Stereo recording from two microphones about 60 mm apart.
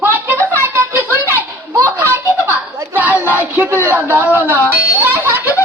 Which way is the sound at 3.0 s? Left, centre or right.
Right.